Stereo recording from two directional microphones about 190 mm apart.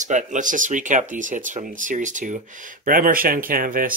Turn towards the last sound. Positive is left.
turn(degrees=-45)  # may be behind; listen again after turning